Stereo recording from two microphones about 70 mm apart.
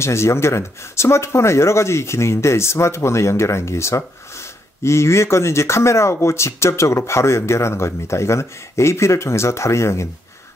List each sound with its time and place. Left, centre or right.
0.0 s speech: left